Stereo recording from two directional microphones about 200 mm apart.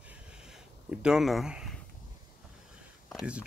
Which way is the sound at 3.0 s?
5° right (ahead or behind).